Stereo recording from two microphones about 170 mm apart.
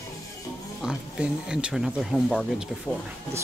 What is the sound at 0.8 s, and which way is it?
Speech, 5° right (ahead or behind).